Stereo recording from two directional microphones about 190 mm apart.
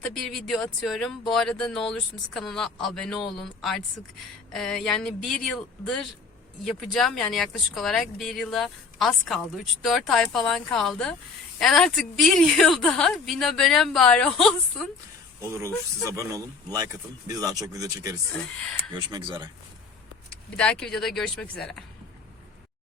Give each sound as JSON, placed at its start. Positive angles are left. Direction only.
{"t": 0.1, "sound": "a woman's voice", "side_deg": 0}
{"t": 16.0, "sound": "speech", "side_deg": -15}
{"t": 20.6, "sound": "a woman's voice", "side_deg": 5}